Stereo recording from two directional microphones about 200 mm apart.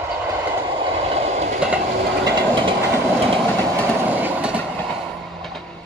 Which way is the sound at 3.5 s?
10° left (ahead or behind).